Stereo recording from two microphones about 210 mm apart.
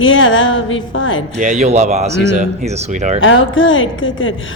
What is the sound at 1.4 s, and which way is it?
Speech, 35° right (ahead or behind).